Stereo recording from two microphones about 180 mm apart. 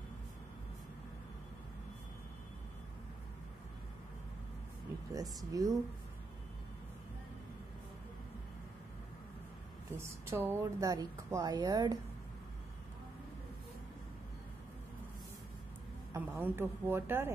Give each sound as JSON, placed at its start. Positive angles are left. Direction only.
{"t": 5.5, "sound": "a woman's voice", "side_deg": -20}
{"t": 9.9, "sound": "a woman's voice", "side_deg": -15}
{"t": 16.1, "sound": "a woman's voice", "side_deg": -10}